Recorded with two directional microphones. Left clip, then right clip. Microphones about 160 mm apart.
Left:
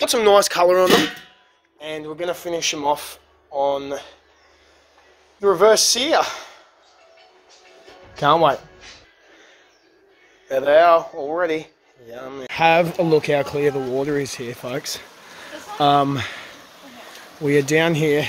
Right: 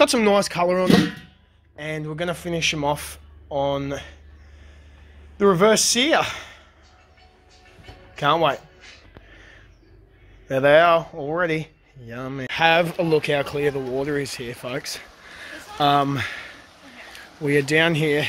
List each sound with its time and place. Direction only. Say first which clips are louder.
0.0 s speech: right 1 dB; 10° left (ahead or behind)
0.3 s speech: left 5 dB; 30° left (ahead or behind)
1.8 s a man's voice: even; centre (ahead or behind)
5.4 s a man's voice: left 2 dB; centre (ahead or behind)
8.2 s a man's voice: left 4 dB; centre (ahead or behind)
10.5 s a man's voice: left 2 dB; centre (ahead or behind)